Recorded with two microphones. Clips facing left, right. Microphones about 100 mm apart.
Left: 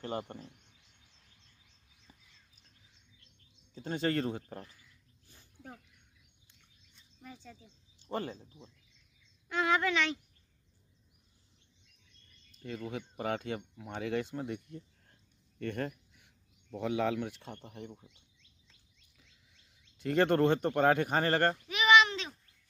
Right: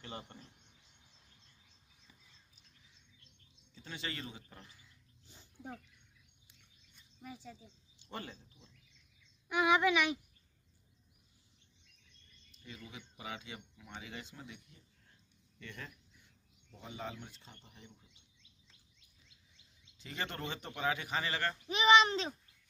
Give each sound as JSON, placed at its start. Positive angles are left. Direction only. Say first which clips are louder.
{"t": 0.0, "sound": "speech", "louder": "left 10 dB", "side_deg": 40}
{"t": 3.7, "sound": "speech", "louder": "left 12 dB", "side_deg": 45}
{"t": 4.6, "sound": "a sound", "louder": "left 1 dB", "side_deg": -20}
{"t": 7.0, "sound": "speech", "louder": "right 1 dB", "side_deg": -5}
{"t": 8.0, "sound": "speech", "louder": "left 9 dB", "side_deg": 40}
{"t": 9.5, "sound": "speech", "louder": "right 1 dB", "side_deg": -15}
{"t": 12.5, "sound": "speech", "louder": "left 12 dB", "side_deg": 55}
{"t": 19.2, "sound": "speech", "louder": "even", "side_deg": 60}
{"t": 21.6, "sound": "a sound", "louder": "even", "side_deg": -30}